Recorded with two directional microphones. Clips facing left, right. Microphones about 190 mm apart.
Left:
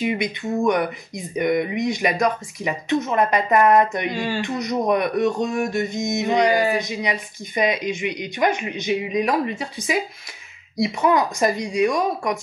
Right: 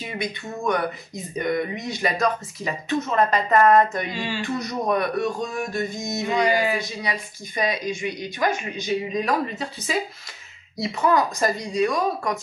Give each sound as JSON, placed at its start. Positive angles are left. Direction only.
{"t": 0.0, "sound": "speech", "side_deg": 15}
{"t": 4.1, "sound": "speech", "side_deg": 50}
{"t": 4.4, "sound": "speech", "side_deg": 20}
{"t": 6.5, "sound": "speech", "side_deg": 45}
{"t": 6.8, "sound": "speech", "side_deg": 20}